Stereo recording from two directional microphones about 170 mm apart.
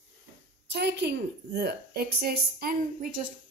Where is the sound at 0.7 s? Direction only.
80° right.